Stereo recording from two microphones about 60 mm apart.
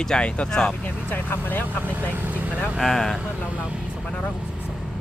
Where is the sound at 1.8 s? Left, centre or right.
Right.